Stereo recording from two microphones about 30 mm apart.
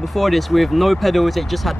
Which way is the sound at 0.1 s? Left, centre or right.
Centre.